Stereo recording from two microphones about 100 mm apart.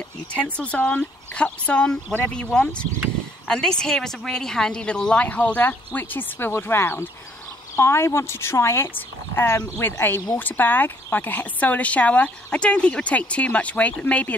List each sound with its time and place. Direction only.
0.3 s speech: 10° left (ahead or behind)